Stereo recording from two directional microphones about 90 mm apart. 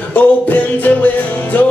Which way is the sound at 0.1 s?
20° left (ahead or behind).